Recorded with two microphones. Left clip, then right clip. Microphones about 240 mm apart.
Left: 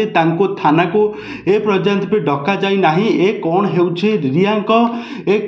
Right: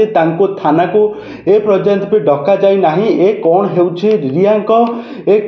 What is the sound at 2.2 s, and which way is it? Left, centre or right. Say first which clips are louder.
Speech: right 7 dB; left.